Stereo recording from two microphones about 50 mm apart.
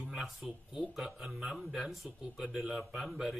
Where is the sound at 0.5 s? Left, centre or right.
Centre.